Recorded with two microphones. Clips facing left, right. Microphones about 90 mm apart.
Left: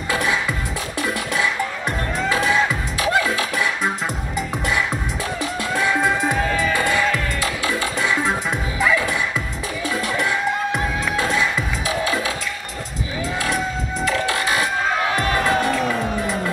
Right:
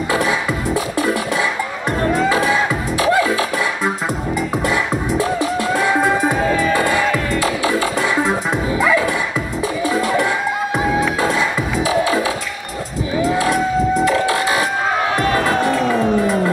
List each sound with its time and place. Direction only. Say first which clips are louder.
0.1 s music: right 3 dB; 20° right (ahead or behind)
1.9 s music: right 9 dB; 15° right (ahead or behind)